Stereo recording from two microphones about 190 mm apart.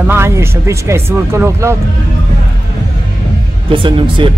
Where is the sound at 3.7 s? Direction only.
25° right (ahead or behind).